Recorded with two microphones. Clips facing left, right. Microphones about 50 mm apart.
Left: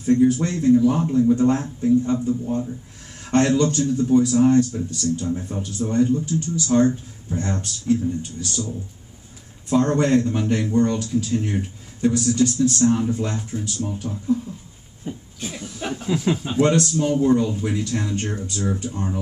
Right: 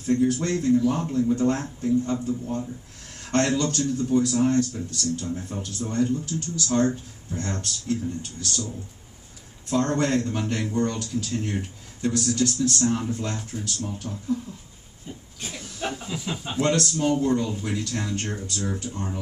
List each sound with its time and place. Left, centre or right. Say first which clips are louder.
0.0 s speech: left 5 dB; centre
3.5 s speech: left 5 dB; centre
9.7 s speech: left 5 dB; centre
15.8 s speech: left 1 dB; centre
16.1 s speech: left 10 dB; left
16.6 s speech: left 3 dB; centre